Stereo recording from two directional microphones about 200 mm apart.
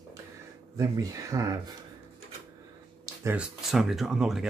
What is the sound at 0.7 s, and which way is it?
Speech, 15° right (ahead or behind).